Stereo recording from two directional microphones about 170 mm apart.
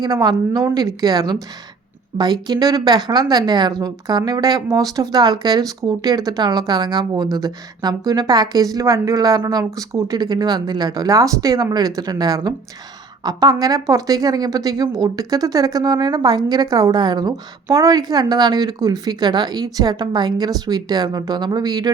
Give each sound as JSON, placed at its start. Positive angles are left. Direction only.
{"t": 0.0, "sound": "speech", "side_deg": -25}